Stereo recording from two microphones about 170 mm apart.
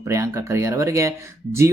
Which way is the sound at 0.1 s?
15° right (ahead or behind).